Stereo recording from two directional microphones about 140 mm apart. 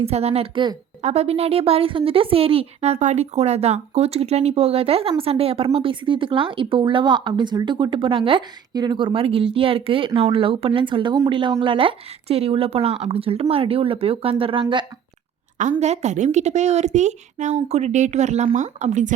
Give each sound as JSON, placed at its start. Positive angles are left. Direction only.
{"t": 0.0, "sound": "speech", "side_deg": -45}
{"t": 1.0, "sound": "a woman's voice", "side_deg": -50}
{"t": 15.8, "sound": "a woman's voice", "side_deg": -55}